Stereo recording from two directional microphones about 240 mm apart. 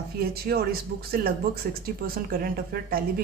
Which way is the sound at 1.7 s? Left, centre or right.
Right.